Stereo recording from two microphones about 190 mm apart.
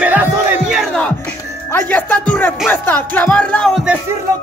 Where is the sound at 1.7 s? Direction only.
10° left (ahead or behind).